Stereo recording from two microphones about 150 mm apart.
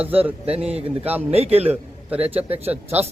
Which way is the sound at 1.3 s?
40° right (ahead or behind).